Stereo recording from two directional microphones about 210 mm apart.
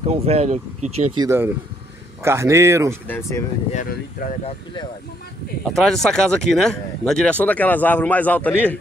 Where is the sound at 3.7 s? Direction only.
40° left (ahead or behind).